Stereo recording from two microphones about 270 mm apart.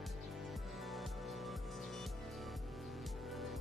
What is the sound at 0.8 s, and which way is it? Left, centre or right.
Music, centre.